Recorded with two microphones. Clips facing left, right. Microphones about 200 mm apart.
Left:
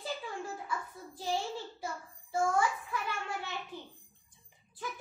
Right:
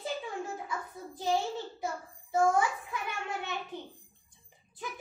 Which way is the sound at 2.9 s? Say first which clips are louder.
Even; 20° right (ahead or behind).